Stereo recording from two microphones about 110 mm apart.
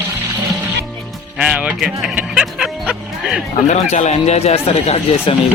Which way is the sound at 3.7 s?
90° left.